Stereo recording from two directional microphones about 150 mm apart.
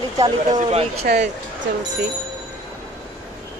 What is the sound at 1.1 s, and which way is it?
Speech, 85° right.